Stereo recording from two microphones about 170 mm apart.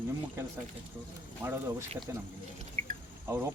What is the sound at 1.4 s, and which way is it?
Speech, 15° right (ahead or behind).